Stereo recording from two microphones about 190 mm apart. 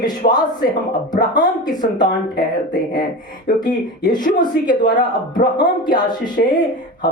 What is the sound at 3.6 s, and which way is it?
A woman's voice, 20° left (ahead or behind).